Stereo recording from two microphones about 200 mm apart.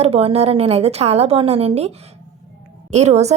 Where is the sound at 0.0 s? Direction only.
30° right (ahead or behind).